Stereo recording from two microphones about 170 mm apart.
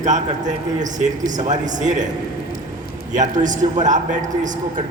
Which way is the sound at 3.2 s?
45° right (ahead or behind).